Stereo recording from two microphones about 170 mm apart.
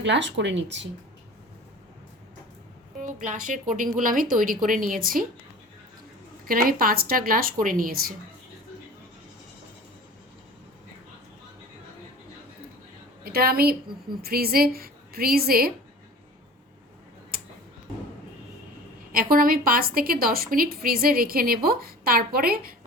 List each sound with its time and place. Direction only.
0.0 s speech: 90° right
3.3 s a woman's voice: 50° right (ahead or behind)
6.4 s a woman's voice: 55° right (ahead or behind)
13.2 s a woman's voice: 65° right (ahead or behind)
19.1 s a woman's voice: 55° right (ahead or behind)